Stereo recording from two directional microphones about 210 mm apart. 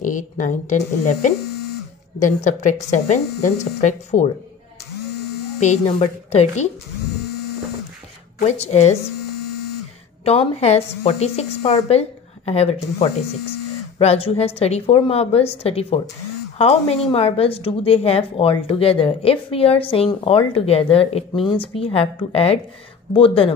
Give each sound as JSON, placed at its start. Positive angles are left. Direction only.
{"t": 0.0, "sound": "speech", "side_deg": 35}
{"t": 5.6, "sound": "speech", "side_deg": 30}
{"t": 8.4, "sound": "speech", "side_deg": 30}
{"t": 10.2, "sound": "a woman's voice", "side_deg": 30}